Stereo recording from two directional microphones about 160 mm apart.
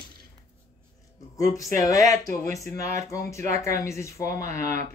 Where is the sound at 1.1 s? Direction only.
20° left (ahead or behind).